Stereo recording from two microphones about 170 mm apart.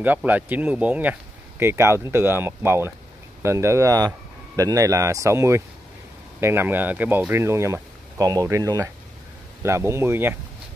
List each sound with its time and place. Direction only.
0.0 s speech: 10° right (ahead or behind)